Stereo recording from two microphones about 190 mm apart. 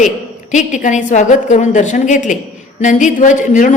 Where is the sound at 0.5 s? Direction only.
40° left (ahead or behind).